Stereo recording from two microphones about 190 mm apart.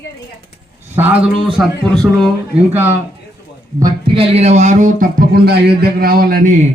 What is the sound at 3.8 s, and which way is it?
A man's voice, 25° right (ahead or behind).